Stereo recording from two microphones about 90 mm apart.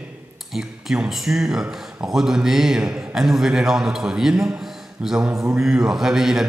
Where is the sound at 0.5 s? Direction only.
5° right (ahead or behind).